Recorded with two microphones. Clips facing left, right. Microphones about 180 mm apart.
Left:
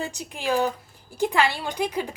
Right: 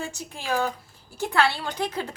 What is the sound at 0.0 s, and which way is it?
A woman's voice, 15° left (ahead or behind).